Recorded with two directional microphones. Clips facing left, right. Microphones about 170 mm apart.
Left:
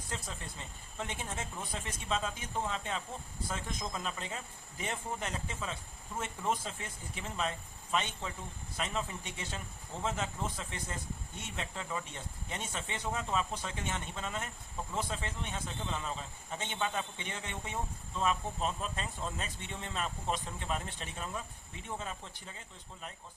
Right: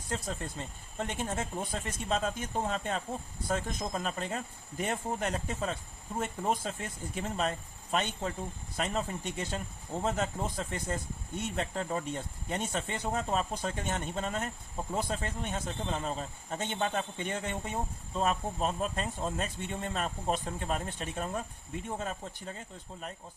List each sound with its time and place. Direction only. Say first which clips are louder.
0.1 s speech: right 7 dB; 50° right (ahead or behind)